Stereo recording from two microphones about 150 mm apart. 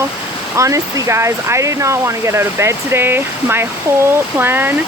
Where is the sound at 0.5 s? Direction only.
20° right (ahead or behind).